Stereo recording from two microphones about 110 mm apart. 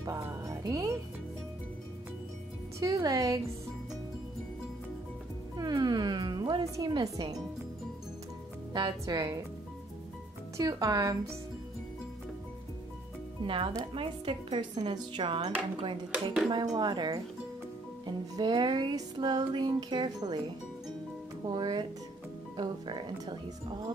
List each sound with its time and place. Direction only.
0.0 s speech: 30° right (ahead or behind)
2.8 s music: 35° right (ahead or behind)
5.6 s music: 40° right (ahead or behind)
9.0 s music: 35° right (ahead or behind)
10.6 s music: 35° right (ahead or behind)
13.5 s speech: 50° right (ahead or behind)
16.4 s music: 40° right (ahead or behind)
21.5 s music: 40° right (ahead or behind)
22.6 s speech: 40° right (ahead or behind)